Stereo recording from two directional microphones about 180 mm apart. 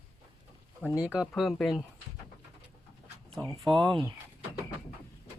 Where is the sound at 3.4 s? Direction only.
20° right (ahead or behind).